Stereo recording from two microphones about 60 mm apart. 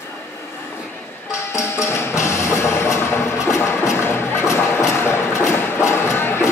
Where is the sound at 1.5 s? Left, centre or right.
Left.